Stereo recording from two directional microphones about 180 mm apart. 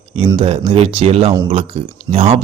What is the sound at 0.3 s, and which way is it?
Speech, 30° right (ahead or behind).